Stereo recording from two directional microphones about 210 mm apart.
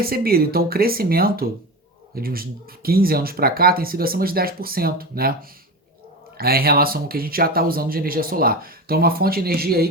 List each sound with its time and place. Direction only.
0.0 s speech: 45° right (ahead or behind)